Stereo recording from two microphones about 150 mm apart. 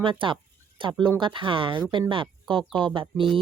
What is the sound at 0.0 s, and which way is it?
Speech, 35° right (ahead or behind).